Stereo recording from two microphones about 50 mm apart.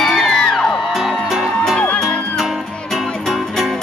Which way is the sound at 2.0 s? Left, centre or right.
Centre.